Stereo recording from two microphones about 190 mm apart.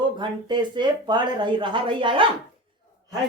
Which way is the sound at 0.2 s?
25° right (ahead or behind).